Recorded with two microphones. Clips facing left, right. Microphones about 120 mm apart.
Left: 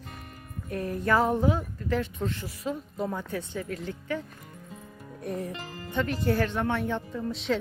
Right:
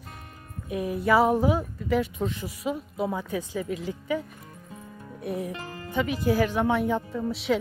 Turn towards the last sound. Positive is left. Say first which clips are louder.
# right 3 dB
turn(degrees=-10)  # may be behind; listen again after turning